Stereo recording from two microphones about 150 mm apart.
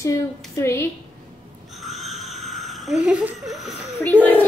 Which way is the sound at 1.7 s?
Centre (ahead or behind).